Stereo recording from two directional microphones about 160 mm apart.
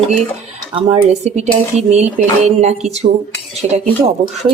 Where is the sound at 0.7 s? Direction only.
45° right (ahead or behind).